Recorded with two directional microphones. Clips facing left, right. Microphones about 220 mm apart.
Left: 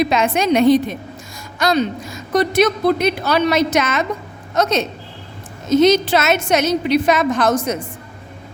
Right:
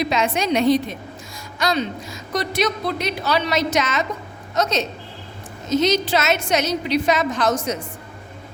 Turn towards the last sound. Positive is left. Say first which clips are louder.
# left 4 dB
turn(degrees=55)  # may be behind; listen again after turning